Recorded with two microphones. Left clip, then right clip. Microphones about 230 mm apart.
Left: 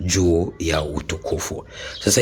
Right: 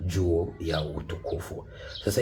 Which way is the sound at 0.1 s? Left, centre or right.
Left.